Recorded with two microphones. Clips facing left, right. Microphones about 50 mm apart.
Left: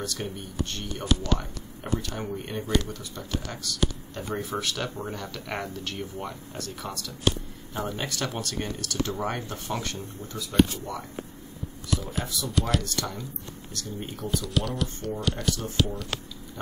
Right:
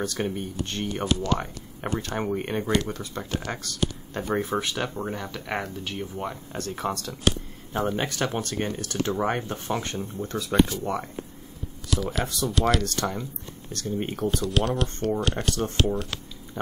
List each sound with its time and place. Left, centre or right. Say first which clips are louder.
0.0 s speech: right 5 dB; right
4.6 s speech: right 3 dB; right
6.5 s speech: right 6 dB; right
10.2 s speech: right 6 dB; right
10.7 s speech: right 6 dB; right
11.9 s speech: right 4 dB; right
12.3 s speech: right 4 dB; right
12.5 s speech: right 4 dB; right
12.8 s speech: right 4 dB; right